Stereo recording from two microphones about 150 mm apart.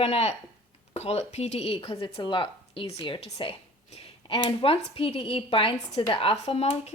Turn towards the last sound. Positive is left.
turn(degrees=45)  # may be behind; listen again after turning